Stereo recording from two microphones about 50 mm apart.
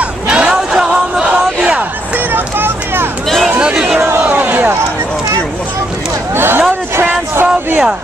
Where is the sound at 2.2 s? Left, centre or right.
Right.